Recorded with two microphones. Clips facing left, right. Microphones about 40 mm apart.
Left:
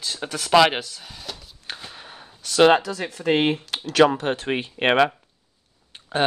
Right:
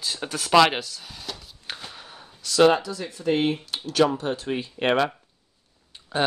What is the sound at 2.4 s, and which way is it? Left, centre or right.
Speech, left.